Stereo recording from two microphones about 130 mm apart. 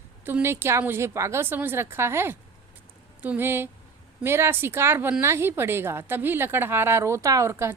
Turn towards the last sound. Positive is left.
turn(degrees=-20)  # may be behind; listen again after turning